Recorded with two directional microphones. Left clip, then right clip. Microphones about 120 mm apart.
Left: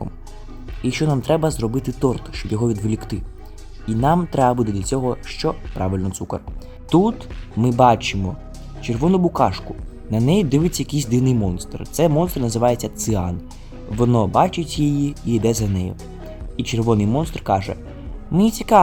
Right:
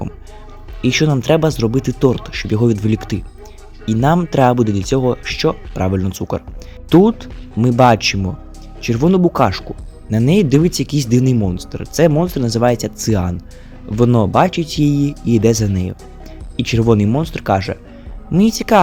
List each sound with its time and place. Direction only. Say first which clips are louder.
0.8 s speech: right 6 dB; 30° right (ahead or behind)